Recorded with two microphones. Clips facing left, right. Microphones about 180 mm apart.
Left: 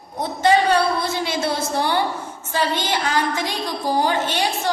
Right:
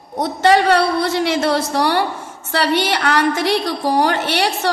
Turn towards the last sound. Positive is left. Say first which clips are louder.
# right 3 dB
turn(degrees=-70)  # may be behind; listen again after turning